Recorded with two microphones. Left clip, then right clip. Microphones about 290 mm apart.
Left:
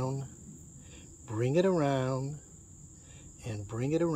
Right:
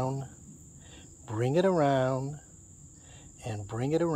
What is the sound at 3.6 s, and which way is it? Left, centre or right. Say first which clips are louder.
Speech: right 2 dB; centre.